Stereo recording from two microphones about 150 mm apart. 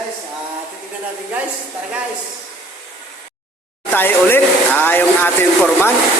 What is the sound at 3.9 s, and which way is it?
Speech, 15° left (ahead or behind).